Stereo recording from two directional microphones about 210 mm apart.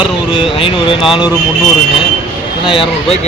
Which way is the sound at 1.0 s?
5° right (ahead or behind).